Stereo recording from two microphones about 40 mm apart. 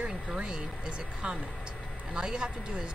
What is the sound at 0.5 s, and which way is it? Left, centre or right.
Speech, right.